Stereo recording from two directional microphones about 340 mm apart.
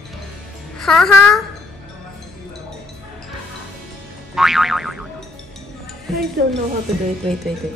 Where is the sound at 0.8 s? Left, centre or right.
Centre.